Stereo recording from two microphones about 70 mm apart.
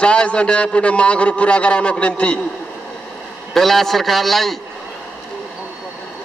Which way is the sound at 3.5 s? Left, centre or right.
Centre.